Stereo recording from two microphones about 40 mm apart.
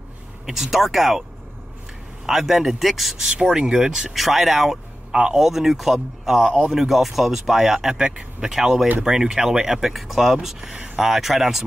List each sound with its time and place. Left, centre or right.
0.5 s speech: centre
2.2 s speech: centre
3.3 s speech: centre
5.1 s speech: right
5.4 s a man's voice: centre